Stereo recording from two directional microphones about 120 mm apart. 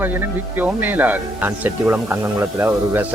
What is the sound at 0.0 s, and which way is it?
A man's voice, 15° right (ahead or behind).